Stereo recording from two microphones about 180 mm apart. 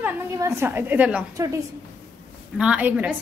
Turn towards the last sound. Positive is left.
turn(degrees=-10)  # may be behind; listen again after turning